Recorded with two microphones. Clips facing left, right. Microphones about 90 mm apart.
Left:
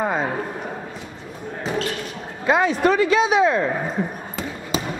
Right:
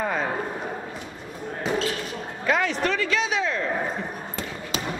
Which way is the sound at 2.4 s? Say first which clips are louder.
Left 6 dB; 20° left (ahead or behind).